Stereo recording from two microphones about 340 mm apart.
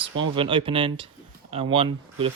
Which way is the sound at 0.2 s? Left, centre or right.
Centre.